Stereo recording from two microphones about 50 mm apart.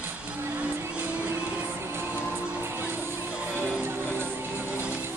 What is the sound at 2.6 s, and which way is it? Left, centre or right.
Music, right.